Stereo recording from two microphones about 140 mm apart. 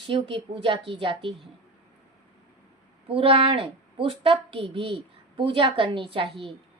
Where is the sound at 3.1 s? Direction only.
40° right (ahead or behind).